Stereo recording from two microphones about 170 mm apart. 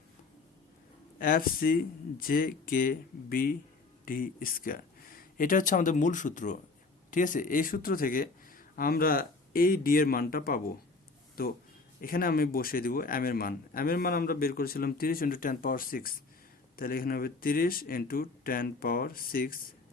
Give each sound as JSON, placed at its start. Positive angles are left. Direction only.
{"t": 1.2, "sound": "speech", "side_deg": 55}